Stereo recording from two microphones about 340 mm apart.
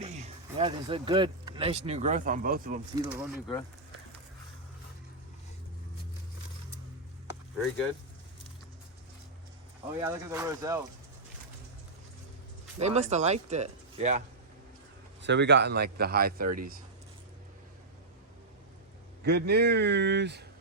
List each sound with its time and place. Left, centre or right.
0.0 s speech: centre
2.9 s speech: centre
10.0 s speech: centre
12.8 s a man's voice: centre
15.2 s a man's voice: right
19.2 s a man's voice: right